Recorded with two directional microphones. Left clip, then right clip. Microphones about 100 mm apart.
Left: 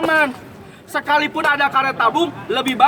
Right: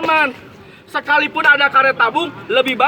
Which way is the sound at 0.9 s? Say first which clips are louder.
Right 2 dB; 30° left (ahead or behind).